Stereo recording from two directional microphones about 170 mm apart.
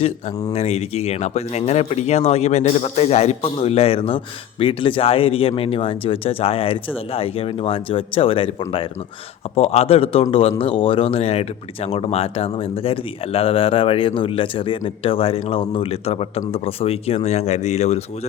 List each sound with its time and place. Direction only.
0.5 s speech: 40° left (ahead or behind)